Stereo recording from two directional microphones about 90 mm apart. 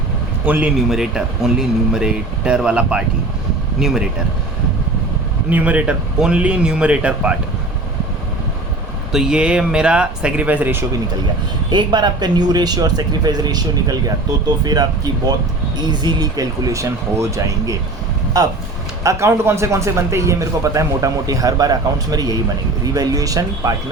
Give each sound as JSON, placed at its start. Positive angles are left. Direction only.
{"t": 0.4, "sound": "a man's voice", "side_deg": -20}
{"t": 0.9, "sound": "speech", "side_deg": -5}
{"t": 5.5, "sound": "speech", "side_deg": -15}
{"t": 9.1, "sound": "speech", "side_deg": -10}
{"t": 11.7, "sound": "a man's voice", "side_deg": -55}
{"t": 19.0, "sound": "speech", "side_deg": -35}